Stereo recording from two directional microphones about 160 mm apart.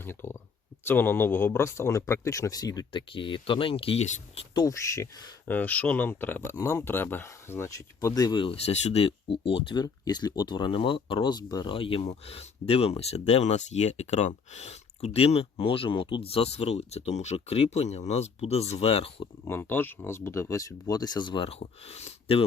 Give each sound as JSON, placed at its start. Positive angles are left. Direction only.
{"t": 0.0, "sound": "speech", "side_deg": 15}
{"t": 4.5, "sound": "speech", "side_deg": 20}
{"t": 5.5, "sound": "speech", "side_deg": 10}
{"t": 19.5, "sound": "speech", "side_deg": 15}